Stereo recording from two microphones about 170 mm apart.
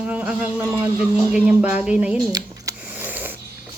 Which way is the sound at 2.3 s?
20° right (ahead or behind).